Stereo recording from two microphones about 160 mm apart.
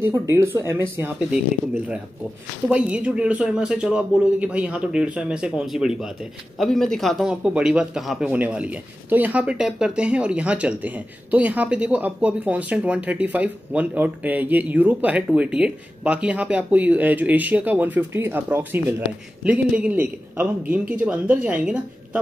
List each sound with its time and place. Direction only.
0.1 s a man's voice: 15° right (ahead or behind)
2.7 s a man's voice: 5° right (ahead or behind)